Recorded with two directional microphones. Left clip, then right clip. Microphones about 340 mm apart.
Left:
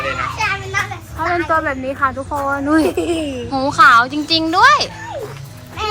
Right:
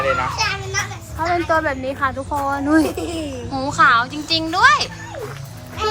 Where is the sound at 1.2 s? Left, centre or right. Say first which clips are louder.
Left 1 dB; centre.